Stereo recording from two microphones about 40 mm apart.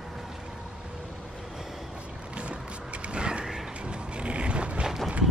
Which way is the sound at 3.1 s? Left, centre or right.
Right.